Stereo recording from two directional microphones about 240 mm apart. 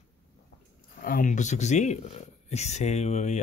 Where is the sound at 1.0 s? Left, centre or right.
Left.